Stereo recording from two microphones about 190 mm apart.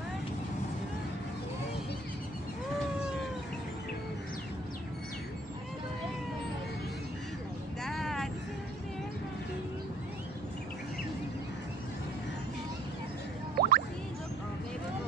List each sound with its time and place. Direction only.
7.8 s vehicle: centre (ahead or behind)
13.6 s music: 50° right (ahead or behind)